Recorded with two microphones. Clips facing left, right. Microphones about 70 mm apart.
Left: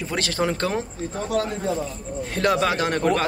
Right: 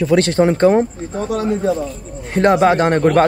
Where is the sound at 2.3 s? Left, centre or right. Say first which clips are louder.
Right 9 dB; right.